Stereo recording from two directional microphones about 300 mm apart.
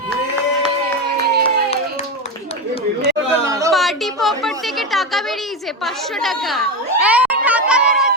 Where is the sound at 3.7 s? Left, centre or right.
Centre.